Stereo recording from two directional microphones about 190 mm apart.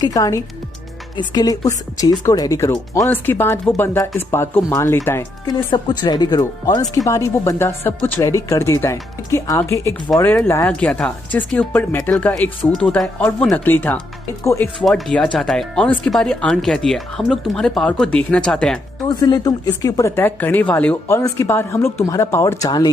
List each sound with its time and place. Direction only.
0.0 s speech: 20° left (ahead or behind)
14.8 s speech: centre (ahead or behind)
19.0 s speech: 20° left (ahead or behind)